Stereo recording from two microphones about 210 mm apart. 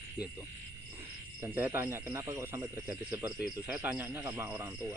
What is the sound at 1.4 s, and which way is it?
Speech, 10° right (ahead or behind).